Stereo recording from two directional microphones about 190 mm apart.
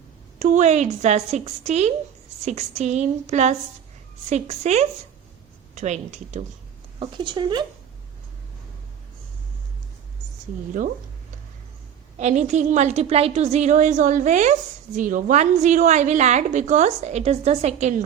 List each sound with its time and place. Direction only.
0.3 s a woman's voice: 40° right (ahead or behind)
7.0 s speech: 25° right (ahead or behind)
12.1 s a woman's voice: 40° right (ahead or behind)